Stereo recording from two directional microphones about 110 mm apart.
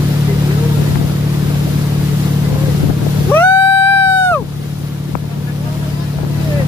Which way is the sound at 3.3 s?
20° left (ahead or behind).